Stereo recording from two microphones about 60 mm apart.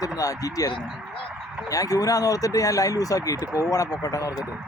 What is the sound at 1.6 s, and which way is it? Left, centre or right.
Speech, left.